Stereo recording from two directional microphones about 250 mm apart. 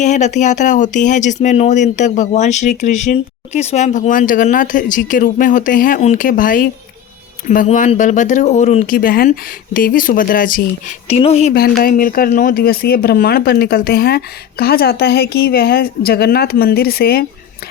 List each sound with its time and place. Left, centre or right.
0.0 s speech: left